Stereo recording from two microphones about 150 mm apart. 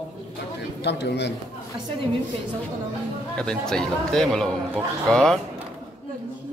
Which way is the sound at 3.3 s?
5° left (ahead or behind).